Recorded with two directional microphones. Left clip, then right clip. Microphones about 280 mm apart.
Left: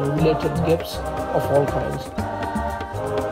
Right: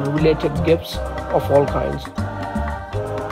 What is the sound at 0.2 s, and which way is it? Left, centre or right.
Speech, right.